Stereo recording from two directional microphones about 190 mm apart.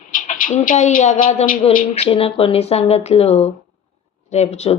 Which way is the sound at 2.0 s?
30° left (ahead or behind).